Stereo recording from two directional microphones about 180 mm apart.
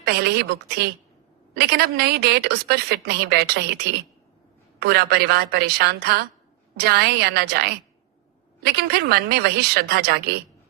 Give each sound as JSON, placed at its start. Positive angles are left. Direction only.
{"t": 0.0, "sound": "a woman's voice", "side_deg": -65}